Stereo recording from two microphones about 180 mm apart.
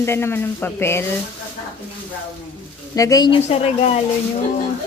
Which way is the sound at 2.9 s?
20° left (ahead or behind).